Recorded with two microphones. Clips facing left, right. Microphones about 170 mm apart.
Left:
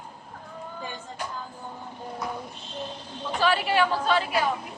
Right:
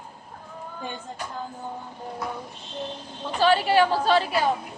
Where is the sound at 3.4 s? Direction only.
30° right (ahead or behind).